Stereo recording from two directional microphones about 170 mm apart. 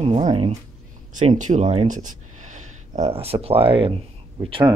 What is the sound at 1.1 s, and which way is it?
Speech, 45° right (ahead or behind).